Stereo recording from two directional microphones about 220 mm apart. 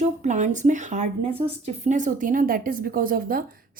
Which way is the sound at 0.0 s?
35° right (ahead or behind).